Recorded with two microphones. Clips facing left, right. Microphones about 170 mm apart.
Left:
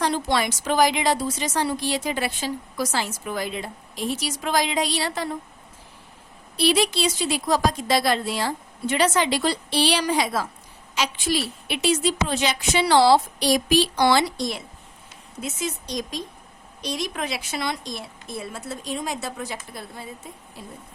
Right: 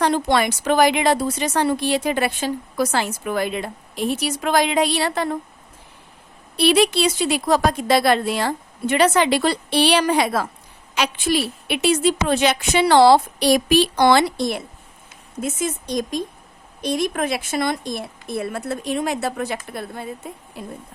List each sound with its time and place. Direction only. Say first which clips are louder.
0.0 s a woman's voice: right 5 dB; 55° right (ahead or behind)
6.6 s a woman's voice: right 5 dB; 60° right (ahead or behind)